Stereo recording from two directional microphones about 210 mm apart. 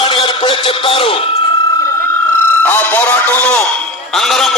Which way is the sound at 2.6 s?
10° left (ahead or behind).